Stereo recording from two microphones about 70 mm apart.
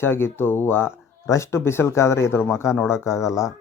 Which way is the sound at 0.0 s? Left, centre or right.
Left.